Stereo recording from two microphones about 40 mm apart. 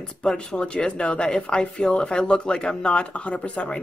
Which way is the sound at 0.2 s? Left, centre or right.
Left.